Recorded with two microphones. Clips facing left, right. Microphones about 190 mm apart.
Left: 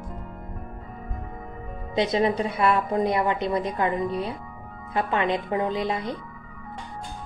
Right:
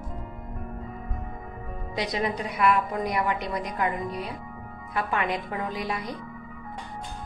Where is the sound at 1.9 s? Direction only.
25° left (ahead or behind).